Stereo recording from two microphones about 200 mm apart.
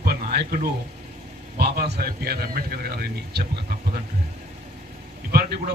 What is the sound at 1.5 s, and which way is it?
Speech, 55° right (ahead or behind).